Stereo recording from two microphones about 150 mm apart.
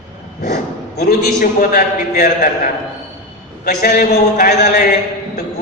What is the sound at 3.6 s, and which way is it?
Speech, 80° left.